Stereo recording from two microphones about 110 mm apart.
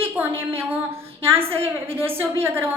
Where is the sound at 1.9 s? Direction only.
20° right (ahead or behind).